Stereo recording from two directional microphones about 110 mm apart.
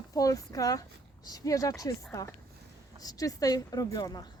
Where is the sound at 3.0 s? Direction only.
35° left (ahead or behind).